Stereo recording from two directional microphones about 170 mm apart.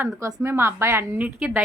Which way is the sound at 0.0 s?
15° right (ahead or behind).